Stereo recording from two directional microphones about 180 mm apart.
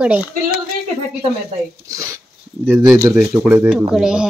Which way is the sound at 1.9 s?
15° right (ahead or behind).